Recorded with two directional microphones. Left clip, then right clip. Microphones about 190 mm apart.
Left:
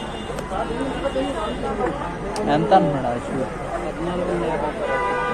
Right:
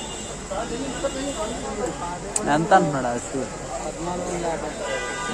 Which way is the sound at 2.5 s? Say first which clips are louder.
Left 1 dB; 45° right (ahead or behind).